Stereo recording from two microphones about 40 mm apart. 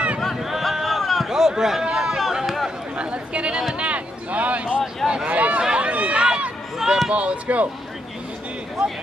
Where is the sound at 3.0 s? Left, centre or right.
Right.